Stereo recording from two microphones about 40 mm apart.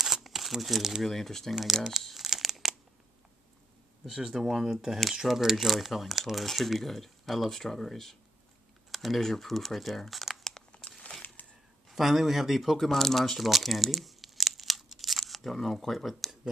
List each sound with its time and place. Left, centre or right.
0.0 s crumpling: centre
1.0 s speech: centre
2.2 s crumpling: centre
4.0 s speech: centre
10.5 s crumpling: left
11.4 s a sound: left
11.9 s speech: centre
12.7 s speech: centre
16.1 s a sound: centre